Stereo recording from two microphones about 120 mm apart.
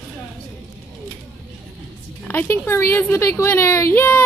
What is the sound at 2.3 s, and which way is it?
A woman's voice, 15° left (ahead or behind).